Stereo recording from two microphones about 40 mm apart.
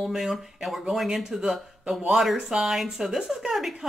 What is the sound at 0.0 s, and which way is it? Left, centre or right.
Speech, centre.